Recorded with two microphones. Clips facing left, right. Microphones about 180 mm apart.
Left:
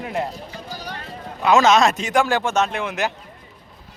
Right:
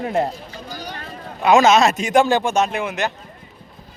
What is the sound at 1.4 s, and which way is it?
Speech, 15° right (ahead or behind).